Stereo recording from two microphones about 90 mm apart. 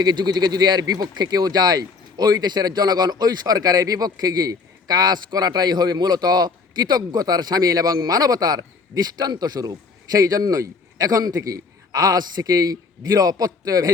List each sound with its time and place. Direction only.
0.0 s speech: 50° right (ahead or behind)